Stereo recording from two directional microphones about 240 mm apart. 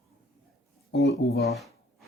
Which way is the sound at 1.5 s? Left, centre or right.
Centre.